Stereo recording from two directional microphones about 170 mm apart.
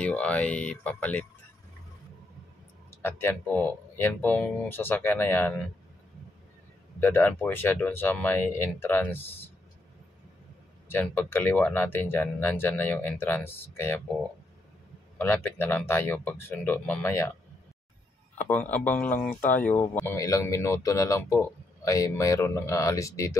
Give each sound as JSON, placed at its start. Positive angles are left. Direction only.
{"t": 0.0, "sound": "speech", "side_deg": 10}
{"t": 3.0, "sound": "speech", "side_deg": 15}
{"t": 7.0, "sound": "speech", "side_deg": 10}
{"t": 10.9, "sound": "speech", "side_deg": 10}
{"t": 15.1, "sound": "speech", "side_deg": 10}
{"t": 18.4, "sound": "speech", "side_deg": 10}